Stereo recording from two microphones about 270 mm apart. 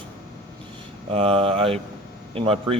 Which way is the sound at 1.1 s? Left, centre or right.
Right.